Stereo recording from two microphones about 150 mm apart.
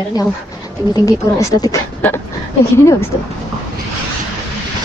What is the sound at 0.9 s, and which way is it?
A woman's voice, 25° left (ahead or behind).